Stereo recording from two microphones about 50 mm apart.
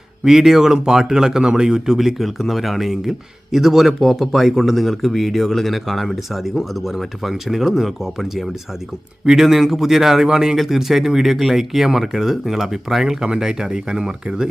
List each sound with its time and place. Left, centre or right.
0.3 s speech: centre